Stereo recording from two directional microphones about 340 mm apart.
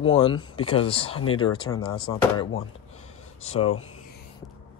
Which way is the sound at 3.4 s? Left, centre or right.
Centre.